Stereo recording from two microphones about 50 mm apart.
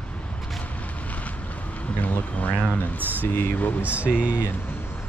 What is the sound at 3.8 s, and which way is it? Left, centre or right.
Speech, right.